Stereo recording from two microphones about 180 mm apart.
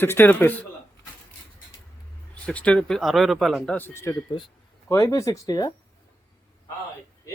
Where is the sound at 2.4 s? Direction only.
5° left (ahead or behind).